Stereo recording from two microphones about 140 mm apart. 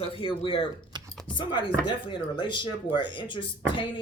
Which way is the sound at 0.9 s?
30° right (ahead or behind).